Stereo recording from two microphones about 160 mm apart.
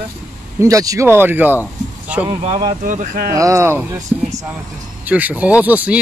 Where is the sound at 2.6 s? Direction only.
55° right (ahead or behind).